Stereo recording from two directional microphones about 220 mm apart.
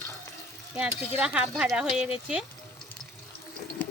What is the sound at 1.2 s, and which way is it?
Speech, 5° right (ahead or behind).